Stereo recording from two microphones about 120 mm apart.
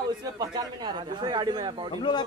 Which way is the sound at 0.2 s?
35° right (ahead or behind).